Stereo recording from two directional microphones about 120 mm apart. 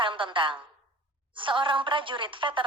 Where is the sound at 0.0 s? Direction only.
45° right (ahead or behind).